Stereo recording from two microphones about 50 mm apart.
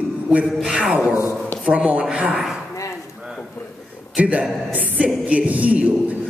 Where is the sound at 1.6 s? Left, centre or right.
Right.